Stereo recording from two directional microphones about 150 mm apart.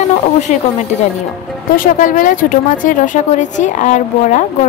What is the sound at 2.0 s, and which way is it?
A woman's voice, 60° left (ahead or behind).